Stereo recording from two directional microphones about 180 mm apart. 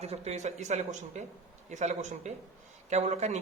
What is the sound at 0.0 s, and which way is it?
Speech, 35° right (ahead or behind).